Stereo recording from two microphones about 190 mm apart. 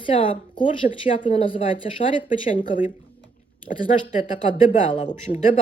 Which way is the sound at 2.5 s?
45° left (ahead or behind).